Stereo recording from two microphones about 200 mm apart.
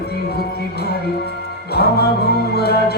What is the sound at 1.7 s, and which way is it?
Music, 50° left (ahead or behind).